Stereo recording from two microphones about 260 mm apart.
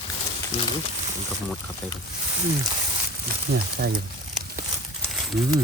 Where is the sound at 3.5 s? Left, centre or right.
Right.